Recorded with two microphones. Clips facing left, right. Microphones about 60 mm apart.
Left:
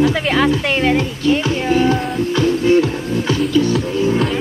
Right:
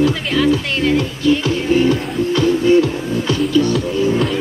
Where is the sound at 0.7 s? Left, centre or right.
Left.